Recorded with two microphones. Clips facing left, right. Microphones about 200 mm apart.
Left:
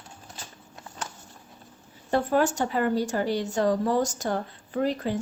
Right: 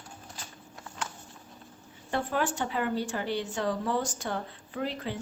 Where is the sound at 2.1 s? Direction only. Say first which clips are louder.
Left 6 dB; 40° left (ahead or behind).